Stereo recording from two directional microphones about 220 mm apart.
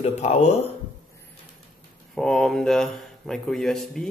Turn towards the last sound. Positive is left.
turn(degrees=0)  # may be behind; listen again after turning